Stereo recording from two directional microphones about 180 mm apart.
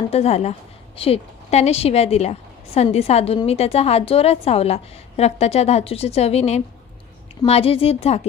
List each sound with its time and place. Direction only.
0.1 s a woman's voice: 35° left (ahead or behind)